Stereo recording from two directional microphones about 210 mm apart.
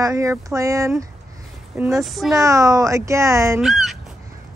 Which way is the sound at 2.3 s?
15° right (ahead or behind).